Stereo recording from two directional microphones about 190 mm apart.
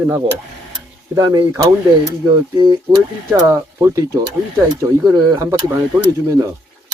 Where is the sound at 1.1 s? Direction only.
20° right (ahead or behind).